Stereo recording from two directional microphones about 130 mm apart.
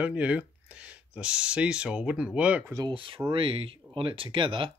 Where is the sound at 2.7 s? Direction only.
35° right (ahead or behind).